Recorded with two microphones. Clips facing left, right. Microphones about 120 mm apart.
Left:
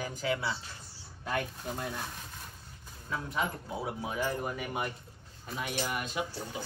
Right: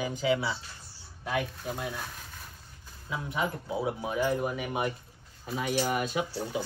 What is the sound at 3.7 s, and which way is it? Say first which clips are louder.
A man's voice: right 5 dB; 20° right (ahead or behind).